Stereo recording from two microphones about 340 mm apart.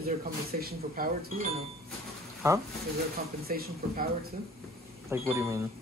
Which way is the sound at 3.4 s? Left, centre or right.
Right.